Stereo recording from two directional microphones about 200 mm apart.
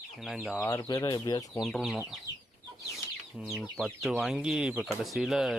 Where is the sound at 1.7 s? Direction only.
Centre (ahead or behind).